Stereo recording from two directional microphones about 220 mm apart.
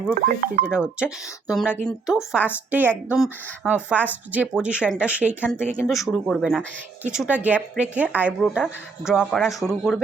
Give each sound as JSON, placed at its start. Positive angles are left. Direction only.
{"t": 0.1, "sound": "speech", "side_deg": -40}
{"t": 0.6, "sound": "a woman's voice", "side_deg": -5}